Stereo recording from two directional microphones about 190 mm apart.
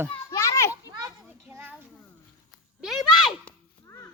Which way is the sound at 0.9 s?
20° right (ahead or behind).